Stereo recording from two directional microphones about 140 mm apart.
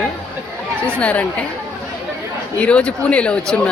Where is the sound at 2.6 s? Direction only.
10° left (ahead or behind).